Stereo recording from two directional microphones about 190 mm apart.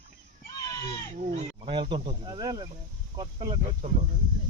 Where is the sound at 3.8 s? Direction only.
35° right (ahead or behind).